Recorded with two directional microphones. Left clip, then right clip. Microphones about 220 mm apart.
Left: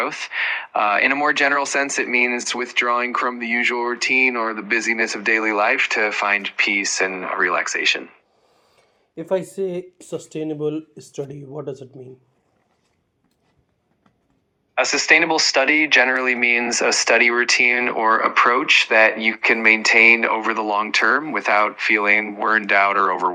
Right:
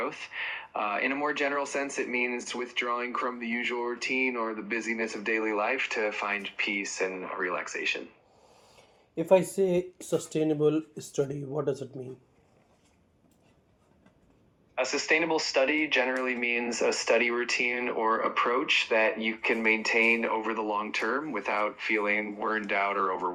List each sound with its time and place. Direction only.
0.0 s speech: 25° left (ahead or behind)
8.7 s a sound: 10° left (ahead or behind)
10.1 s speech: 5° left (ahead or behind)
14.8 s speech: 25° left (ahead or behind)